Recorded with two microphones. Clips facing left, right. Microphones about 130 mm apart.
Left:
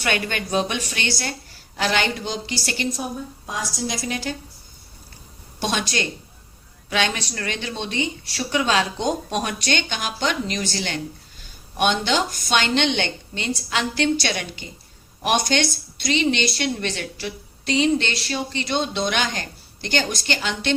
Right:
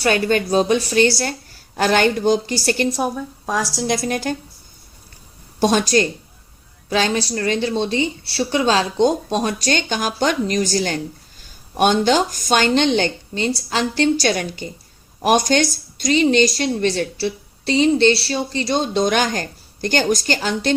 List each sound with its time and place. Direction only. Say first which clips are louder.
0.0 s a woman's voice: right 8 dB; 35° right (ahead or behind)
2.9 s a woman's voice: right 7 dB; 65° right (ahead or behind); by 4.4 s 50° right (ahead or behind)
5.5 s a woman's voice: right 9 dB; 40° right (ahead or behind)